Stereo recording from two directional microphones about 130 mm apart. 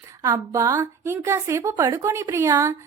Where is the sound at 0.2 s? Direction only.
25° right (ahead or behind).